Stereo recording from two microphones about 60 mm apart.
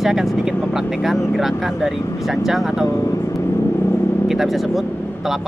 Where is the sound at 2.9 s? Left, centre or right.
Left.